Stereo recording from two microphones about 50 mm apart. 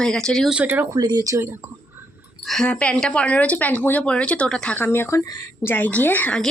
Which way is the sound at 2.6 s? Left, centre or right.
Left.